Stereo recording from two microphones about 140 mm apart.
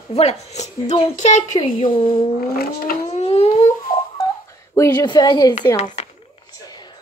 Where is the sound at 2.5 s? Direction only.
90° left.